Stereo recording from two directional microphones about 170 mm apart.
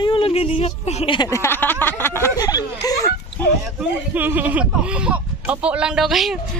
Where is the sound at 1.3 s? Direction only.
15° left (ahead or behind).